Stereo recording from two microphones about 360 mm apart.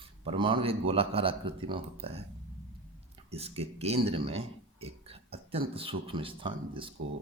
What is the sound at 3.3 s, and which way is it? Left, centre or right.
Speech, centre.